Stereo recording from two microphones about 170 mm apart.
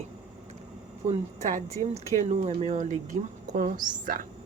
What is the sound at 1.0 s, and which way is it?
Speech, 40° right (ahead or behind).